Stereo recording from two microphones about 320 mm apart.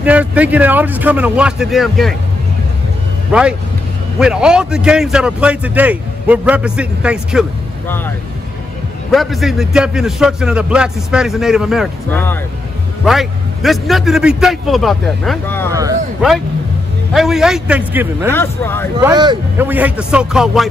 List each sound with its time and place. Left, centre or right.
0.0 s a man's voice: centre
3.3 s a man's voice: centre
9.1 s a man's voice: centre
15.7 s a man's voice: centre
18.3 s speech: centre
18.9 s a man's voice: centre